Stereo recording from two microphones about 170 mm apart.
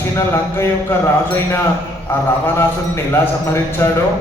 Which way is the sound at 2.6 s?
15° left (ahead or behind).